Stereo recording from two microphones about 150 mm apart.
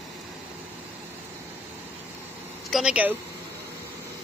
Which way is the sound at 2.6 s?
5° right (ahead or behind).